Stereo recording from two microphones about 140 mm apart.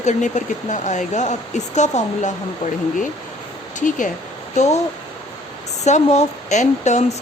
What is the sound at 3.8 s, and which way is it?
Speech, 65° left (ahead or behind).